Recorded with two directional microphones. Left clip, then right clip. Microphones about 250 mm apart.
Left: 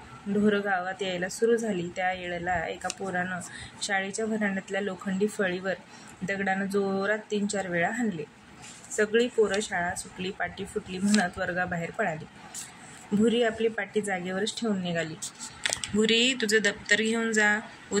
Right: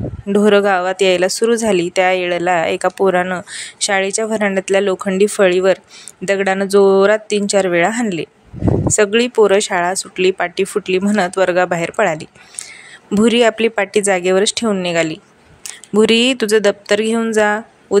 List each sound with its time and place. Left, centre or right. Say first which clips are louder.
0.5 s speech: right 15 dB; right
13.2 s speech: right 13 dB; right